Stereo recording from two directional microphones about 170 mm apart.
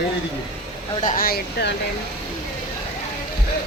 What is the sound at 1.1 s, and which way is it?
Speech, 55° left (ahead or behind).